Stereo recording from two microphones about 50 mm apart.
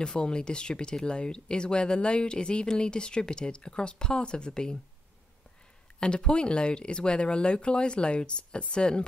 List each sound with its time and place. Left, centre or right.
0.0 s speech: centre
5.9 s speech: centre